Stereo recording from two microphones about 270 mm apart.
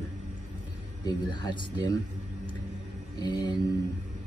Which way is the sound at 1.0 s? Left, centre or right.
Centre.